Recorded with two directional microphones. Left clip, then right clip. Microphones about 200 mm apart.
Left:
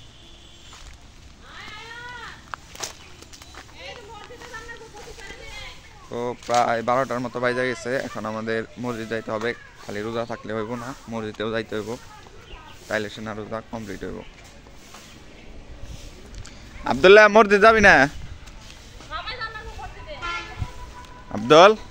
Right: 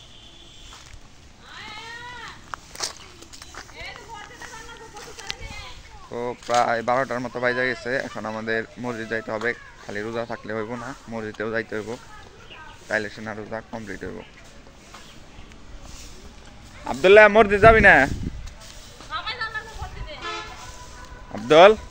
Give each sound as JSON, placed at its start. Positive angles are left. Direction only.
{"t": 2.5, "sound": "walk", "side_deg": 0}
{"t": 6.1, "sound": "speech", "side_deg": 15}
{"t": 16.8, "sound": "speech", "side_deg": 45}
{"t": 19.0, "sound": "a sound", "side_deg": -55}
{"t": 21.3, "sound": "music", "side_deg": 35}